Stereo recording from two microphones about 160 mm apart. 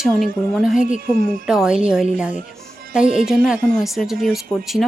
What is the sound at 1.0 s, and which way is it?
Speech, 65° right (ahead or behind).